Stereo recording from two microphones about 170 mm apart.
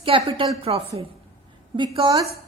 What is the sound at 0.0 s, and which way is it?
A woman's voice, 30° right (ahead or behind).